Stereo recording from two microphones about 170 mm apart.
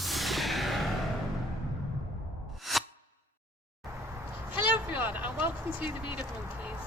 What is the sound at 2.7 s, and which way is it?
Music, centre (ahead or behind).